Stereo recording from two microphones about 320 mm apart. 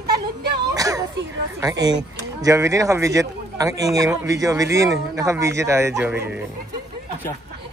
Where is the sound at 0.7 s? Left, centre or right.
Centre.